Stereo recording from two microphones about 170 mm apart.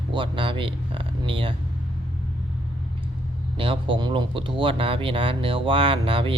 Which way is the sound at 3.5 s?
30° right (ahead or behind).